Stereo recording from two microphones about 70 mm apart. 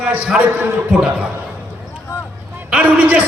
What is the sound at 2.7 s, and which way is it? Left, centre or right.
Speech, right.